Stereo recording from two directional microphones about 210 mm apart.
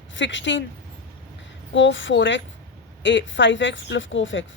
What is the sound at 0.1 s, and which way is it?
Speech, 60° left (ahead or behind).